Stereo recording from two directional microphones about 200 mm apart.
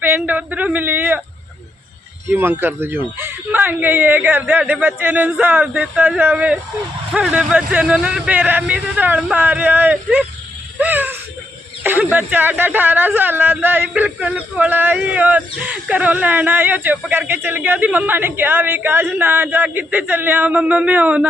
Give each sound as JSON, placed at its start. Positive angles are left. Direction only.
{"t": 0.0, "sound": "speech", "side_deg": -10}
{"t": 2.3, "sound": "speech", "side_deg": -10}
{"t": 10.8, "sound": "a sound", "side_deg": -10}
{"t": 11.8, "sound": "speech", "side_deg": -10}